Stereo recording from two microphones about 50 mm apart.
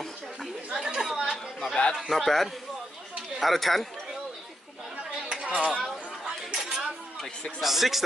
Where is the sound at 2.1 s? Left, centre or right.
Centre.